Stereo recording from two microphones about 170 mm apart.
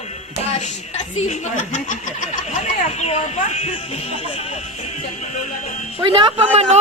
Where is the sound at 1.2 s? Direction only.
45° left (ahead or behind).